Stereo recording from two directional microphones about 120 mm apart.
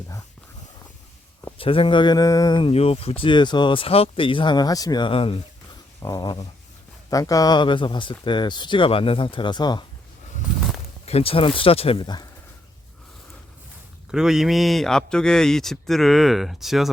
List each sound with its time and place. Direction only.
1.5 s speech: 50° left (ahead or behind)
6.0 s speech: 30° left (ahead or behind)
11.0 s speech: 55° left (ahead or behind)
12.0 s speech: 35° left (ahead or behind)
14.1 s a man's voice: 5° right (ahead or behind)